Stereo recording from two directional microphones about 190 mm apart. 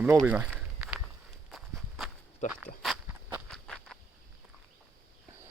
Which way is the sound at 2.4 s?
40° left (ahead or behind).